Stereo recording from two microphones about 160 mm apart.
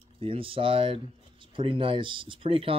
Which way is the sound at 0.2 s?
35° right (ahead or behind).